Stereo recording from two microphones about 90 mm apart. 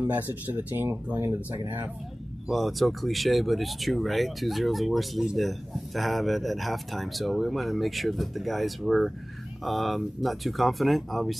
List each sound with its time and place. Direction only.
0.0 s speech: 20° right (ahead or behind)
2.4 s speech: centre (ahead or behind)